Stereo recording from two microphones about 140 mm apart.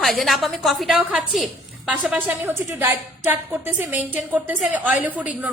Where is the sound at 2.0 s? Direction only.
10° right (ahead or behind).